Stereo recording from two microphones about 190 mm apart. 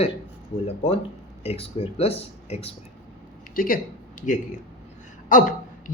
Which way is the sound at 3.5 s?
50° left (ahead or behind).